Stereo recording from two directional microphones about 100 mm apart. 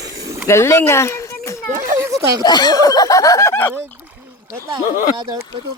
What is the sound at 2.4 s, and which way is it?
Speech, 45° left (ahead or behind).